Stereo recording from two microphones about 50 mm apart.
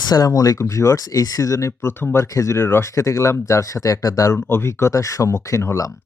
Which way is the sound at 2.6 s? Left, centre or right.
Left.